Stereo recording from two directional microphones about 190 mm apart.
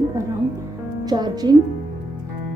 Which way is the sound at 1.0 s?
20° right (ahead or behind).